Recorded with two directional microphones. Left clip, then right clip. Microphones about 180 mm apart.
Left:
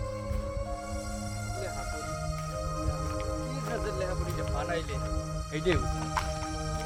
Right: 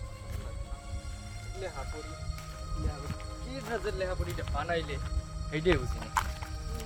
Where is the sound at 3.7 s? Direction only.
5° left (ahead or behind).